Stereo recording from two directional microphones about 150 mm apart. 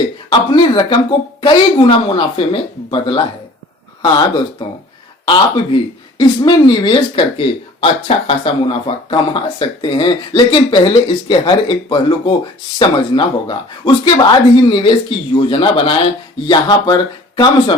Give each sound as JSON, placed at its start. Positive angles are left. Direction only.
{"t": 0.3, "sound": "speech", "side_deg": 30}